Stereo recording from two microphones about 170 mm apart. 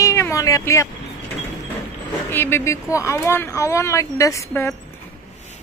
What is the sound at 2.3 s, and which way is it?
Speech, 15° left (ahead or behind).